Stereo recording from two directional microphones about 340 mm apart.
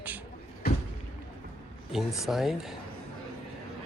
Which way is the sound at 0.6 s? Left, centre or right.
Left.